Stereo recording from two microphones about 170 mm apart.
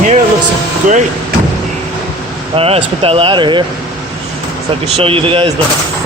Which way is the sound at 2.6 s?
35° right (ahead or behind).